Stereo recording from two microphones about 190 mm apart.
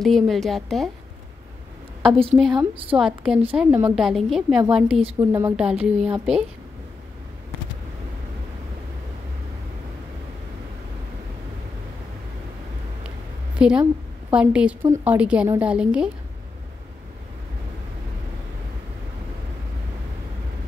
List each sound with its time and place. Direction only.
0.0 s a woman's voice: centre (ahead or behind)
2.0 s a woman's voice: 30° right (ahead or behind)
2.3 s a woman's voice: centre (ahead or behind)
13.6 s a woman's voice: 5° right (ahead or behind)